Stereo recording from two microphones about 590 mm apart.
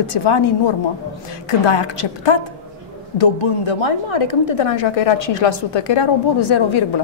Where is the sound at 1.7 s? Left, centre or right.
Left.